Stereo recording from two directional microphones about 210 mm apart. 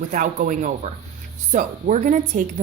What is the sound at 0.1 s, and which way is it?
Speech, 40° right (ahead or behind).